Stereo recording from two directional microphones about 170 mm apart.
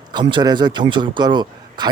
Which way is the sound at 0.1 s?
25° right (ahead or behind).